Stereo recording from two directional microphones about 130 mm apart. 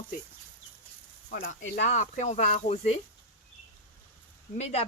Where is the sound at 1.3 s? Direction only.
70° left (ahead or behind).